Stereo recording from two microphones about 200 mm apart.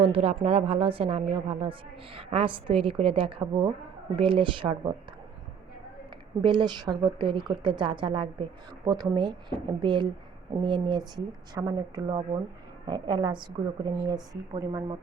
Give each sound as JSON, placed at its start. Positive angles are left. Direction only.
{"t": 0.0, "sound": "a woman's voice", "side_deg": -30}
{"t": 6.4, "sound": "a woman's voice", "side_deg": -25}